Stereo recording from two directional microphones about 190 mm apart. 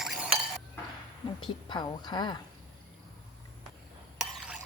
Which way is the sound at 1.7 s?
20° left (ahead or behind).